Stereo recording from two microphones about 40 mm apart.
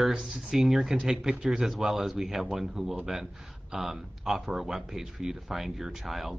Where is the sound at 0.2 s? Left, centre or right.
Centre.